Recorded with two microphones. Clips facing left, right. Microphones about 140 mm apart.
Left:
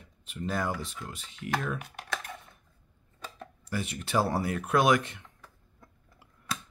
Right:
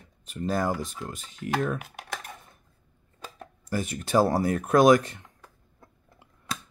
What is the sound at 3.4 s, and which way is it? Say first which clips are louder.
Speech: right 4 dB; 40° right (ahead or behind).